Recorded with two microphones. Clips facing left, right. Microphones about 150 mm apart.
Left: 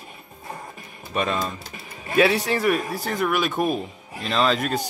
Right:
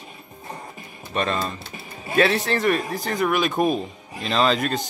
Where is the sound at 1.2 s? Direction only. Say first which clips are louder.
Even; 5° left (ahead or behind).